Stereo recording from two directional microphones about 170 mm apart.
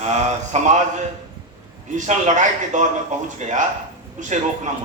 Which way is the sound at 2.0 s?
45° right (ahead or behind).